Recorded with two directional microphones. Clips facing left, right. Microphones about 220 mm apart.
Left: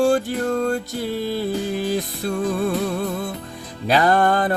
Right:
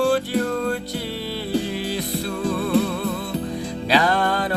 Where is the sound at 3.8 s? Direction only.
50° left (ahead or behind).